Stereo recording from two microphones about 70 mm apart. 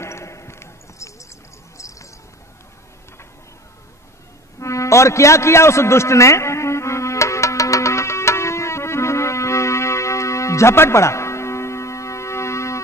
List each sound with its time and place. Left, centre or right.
0.0 s basketball bounce: left
1.8 s a sound: left
4.6 s music: left